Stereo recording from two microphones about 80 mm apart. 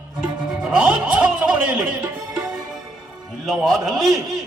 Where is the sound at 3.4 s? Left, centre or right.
Centre.